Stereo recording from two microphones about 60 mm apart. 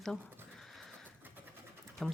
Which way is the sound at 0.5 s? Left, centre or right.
Centre.